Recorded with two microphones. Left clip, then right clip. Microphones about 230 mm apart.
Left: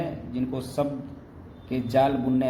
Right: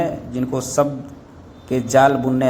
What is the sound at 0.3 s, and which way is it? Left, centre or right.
A man's voice, right.